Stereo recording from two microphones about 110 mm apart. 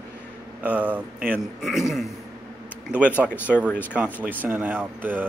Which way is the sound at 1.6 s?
5° right (ahead or behind).